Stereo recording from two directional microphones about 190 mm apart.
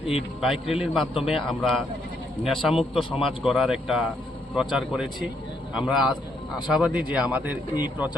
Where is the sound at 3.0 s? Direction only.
25° left (ahead or behind).